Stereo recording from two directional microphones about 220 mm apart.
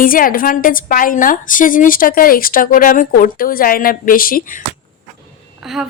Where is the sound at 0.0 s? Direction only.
40° left (ahead or behind).